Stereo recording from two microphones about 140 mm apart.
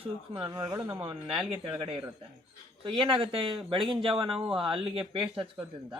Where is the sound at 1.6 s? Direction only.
40° right (ahead or behind).